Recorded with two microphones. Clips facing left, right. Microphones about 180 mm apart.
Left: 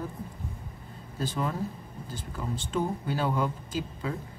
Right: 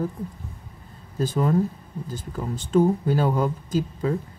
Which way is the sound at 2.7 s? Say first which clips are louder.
Right 11 dB; 45° right (ahead or behind).